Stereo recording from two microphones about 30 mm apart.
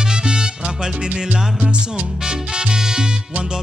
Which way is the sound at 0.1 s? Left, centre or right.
Right.